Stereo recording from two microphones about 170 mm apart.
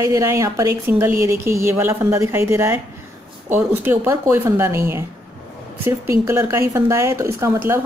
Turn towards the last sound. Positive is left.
turn(degrees=-15)  # may be behind; listen again after turning